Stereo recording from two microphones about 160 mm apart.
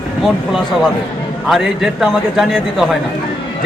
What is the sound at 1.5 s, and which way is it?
A man's voice, centre (ahead or behind).